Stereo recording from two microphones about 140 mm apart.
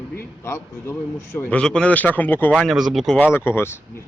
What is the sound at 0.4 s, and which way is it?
A man's voice, 20° left (ahead or behind).